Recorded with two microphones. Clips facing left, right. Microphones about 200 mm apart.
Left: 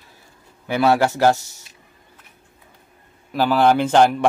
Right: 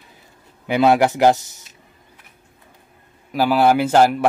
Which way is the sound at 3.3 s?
10° right (ahead or behind).